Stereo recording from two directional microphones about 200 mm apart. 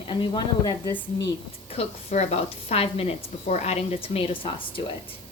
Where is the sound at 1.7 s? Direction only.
30° left (ahead or behind).